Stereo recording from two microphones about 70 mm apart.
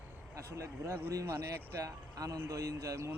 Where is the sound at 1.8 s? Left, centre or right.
Right.